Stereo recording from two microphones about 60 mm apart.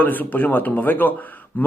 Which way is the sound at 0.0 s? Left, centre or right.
Left.